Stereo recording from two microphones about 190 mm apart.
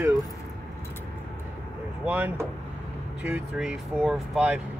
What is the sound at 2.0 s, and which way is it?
Speech, 10° right (ahead or behind).